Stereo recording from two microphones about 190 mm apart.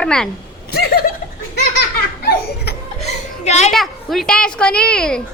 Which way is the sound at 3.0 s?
35° left (ahead or behind).